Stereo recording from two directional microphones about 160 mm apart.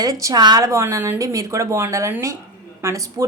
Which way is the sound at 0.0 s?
20° right (ahead or behind).